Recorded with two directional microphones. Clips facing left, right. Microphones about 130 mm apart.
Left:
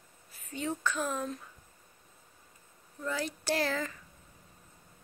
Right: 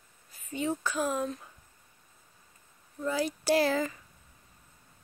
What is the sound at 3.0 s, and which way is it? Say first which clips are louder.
Speech: right 5 dB; 10° right (ahead or behind).